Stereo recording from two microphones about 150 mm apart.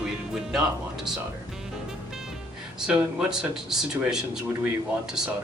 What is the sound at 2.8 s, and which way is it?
Speech, 5° right (ahead or behind).